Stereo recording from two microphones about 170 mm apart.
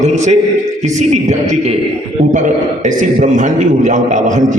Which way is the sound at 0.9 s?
45° right (ahead or behind).